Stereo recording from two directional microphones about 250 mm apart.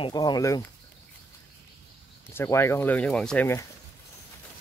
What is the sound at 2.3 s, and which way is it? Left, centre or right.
Speech, centre.